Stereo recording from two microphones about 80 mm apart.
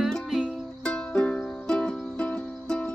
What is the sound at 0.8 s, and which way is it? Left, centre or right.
Music, centre.